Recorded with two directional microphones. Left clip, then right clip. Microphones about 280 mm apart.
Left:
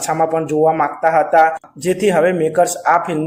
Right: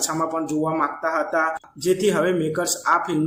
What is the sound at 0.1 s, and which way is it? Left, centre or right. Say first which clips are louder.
A man's voice: left 8 dB; centre.